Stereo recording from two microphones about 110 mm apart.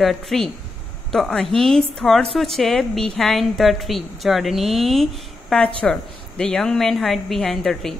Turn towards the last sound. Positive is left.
turn(degrees=5)  # may be behind; listen again after turning